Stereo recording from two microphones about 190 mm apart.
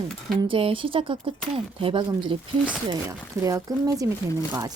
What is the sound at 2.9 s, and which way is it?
Speech, 15° right (ahead or behind).